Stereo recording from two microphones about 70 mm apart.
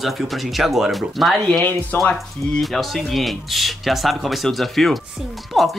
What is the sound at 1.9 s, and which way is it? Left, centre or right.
Speech, left.